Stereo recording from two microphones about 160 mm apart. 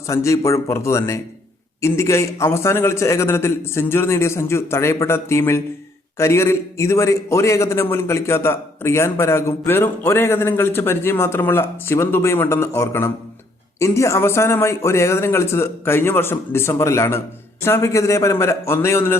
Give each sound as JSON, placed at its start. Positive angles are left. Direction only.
{"t": 0.1, "sound": "a man's voice", "side_deg": 20}